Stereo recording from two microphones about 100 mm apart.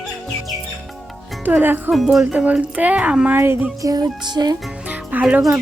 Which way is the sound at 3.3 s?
20° right (ahead or behind).